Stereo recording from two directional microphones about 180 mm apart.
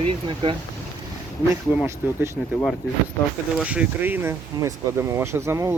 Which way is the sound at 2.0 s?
10° right (ahead or behind).